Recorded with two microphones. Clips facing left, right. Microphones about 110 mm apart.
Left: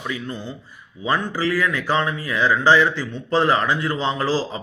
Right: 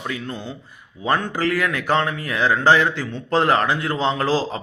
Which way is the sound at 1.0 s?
55° right (ahead or behind).